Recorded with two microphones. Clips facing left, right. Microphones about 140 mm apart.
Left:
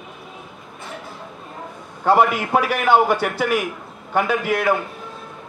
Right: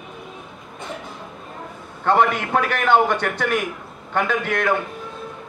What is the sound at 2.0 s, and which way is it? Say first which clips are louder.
A man's voice: left 2 dB; 5° left (ahead or behind).